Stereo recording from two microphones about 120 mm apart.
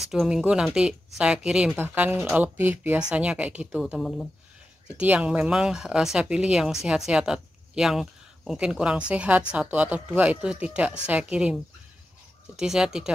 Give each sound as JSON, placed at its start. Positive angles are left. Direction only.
{"t": 0.1, "sound": "speech", "side_deg": -5}
{"t": 4.9, "sound": "speech", "side_deg": -10}
{"t": 12.5, "sound": "speech", "side_deg": -5}